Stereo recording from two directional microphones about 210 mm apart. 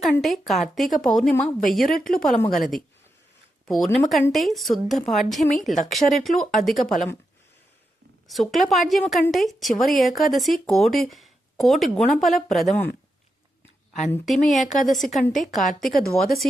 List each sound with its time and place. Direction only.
0.0 s speech: centre (ahead or behind)
2.0 s a woman's voice: 40° left (ahead or behind)
2.5 s speech: centre (ahead or behind)
8.3 s speech: centre (ahead or behind)
14.4 s speech: centre (ahead or behind)